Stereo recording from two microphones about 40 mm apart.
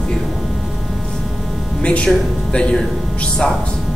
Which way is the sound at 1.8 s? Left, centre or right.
Left.